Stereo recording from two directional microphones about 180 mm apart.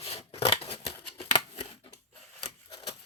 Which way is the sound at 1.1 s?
35° left (ahead or behind).